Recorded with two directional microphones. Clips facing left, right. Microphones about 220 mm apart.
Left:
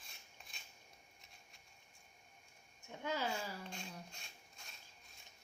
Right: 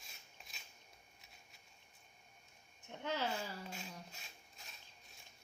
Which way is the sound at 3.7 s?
5° right (ahead or behind).